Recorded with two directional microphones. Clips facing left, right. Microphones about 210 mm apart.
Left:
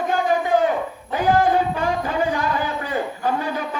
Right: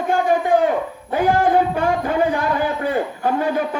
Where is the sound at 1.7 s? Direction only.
55° right (ahead or behind).